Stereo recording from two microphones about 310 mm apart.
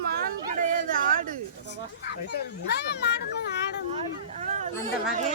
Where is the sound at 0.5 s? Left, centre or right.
Right.